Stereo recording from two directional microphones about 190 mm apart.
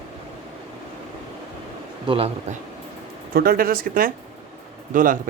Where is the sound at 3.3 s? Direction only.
50° right (ahead or behind).